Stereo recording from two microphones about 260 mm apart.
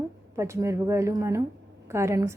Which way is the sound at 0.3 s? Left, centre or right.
Centre.